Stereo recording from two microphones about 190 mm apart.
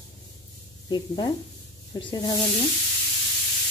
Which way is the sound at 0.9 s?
25° left (ahead or behind).